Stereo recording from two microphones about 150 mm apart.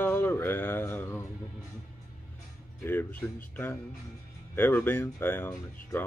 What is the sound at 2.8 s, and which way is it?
Speech, 15° left (ahead or behind).